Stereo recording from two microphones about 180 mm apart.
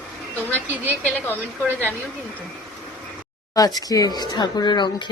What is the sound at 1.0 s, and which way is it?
Speech, 10° left (ahead or behind).